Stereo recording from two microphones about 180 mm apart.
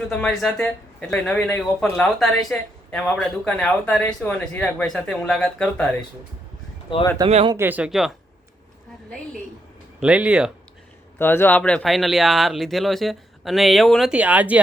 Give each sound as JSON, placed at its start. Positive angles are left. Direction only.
{"t": 0.1, "sound": "speech", "side_deg": 5}
{"t": 6.9, "sound": "speech", "side_deg": 25}
{"t": 7.3, "sound": "speech", "side_deg": -35}
{"t": 7.5, "sound": "speech", "side_deg": -10}
{"t": 10.0, "sound": "speech", "side_deg": -5}
{"t": 11.2, "sound": "speech", "side_deg": 10}